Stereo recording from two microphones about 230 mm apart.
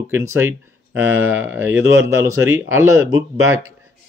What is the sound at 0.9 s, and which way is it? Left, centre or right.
Speech, right.